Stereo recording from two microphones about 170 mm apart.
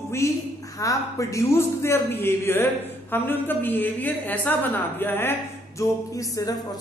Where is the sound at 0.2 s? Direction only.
15° left (ahead or behind).